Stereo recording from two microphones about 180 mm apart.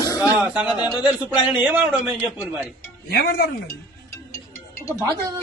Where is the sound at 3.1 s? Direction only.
60° left (ahead or behind).